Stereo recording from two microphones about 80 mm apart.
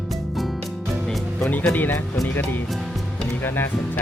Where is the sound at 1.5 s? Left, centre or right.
Left.